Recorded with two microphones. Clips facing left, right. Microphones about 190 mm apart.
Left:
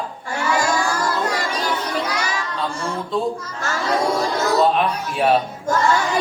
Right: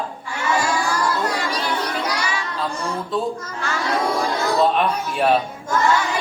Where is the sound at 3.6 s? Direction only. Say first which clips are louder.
Left 1 dB; 40° left (ahead or behind).